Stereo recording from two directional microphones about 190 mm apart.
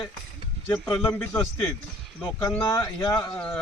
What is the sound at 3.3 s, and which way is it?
Speech, 10° left (ahead or behind).